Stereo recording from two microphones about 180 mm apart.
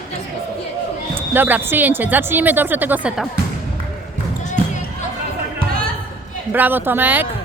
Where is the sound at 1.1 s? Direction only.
10° right (ahead or behind).